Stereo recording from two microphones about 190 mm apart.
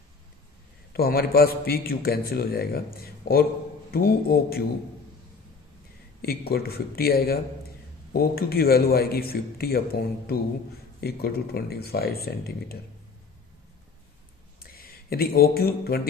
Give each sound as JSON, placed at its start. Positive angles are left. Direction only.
{"t": 0.9, "sound": "a man's voice", "side_deg": 55}
{"t": 6.2, "sound": "a man's voice", "side_deg": 55}
{"t": 14.6, "sound": "speech", "side_deg": 50}